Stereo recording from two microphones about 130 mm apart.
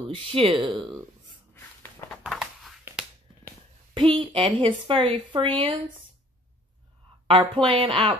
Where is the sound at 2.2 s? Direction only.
5° right (ahead or behind).